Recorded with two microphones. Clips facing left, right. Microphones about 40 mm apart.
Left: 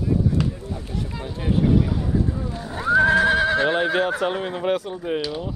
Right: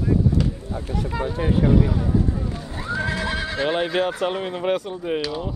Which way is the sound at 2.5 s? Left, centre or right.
Left.